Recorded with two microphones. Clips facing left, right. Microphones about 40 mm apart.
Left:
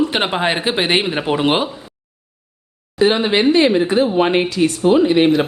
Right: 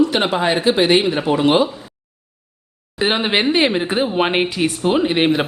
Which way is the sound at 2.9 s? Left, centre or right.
Right.